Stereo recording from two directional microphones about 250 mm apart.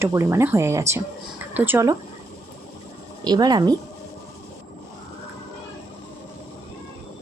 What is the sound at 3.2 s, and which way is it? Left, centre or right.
Speech, centre.